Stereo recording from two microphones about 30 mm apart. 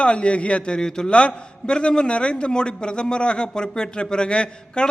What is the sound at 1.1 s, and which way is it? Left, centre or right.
A man's voice, left.